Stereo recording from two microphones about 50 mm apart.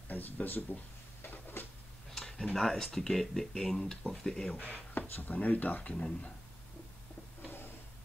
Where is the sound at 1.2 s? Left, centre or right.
Left.